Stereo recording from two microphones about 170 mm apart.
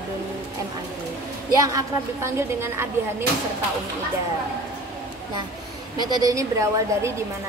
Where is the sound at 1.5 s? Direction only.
20° right (ahead or behind).